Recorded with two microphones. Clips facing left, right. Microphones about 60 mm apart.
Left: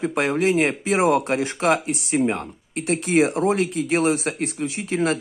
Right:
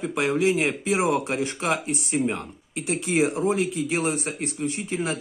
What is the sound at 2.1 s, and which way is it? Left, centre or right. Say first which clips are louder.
Speech: left 4 dB; left.